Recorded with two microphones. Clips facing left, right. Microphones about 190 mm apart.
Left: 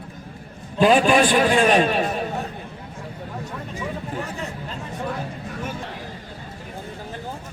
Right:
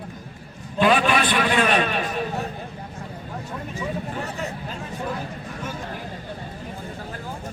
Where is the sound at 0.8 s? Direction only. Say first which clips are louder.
Left 4 dB; 35° left (ahead or behind).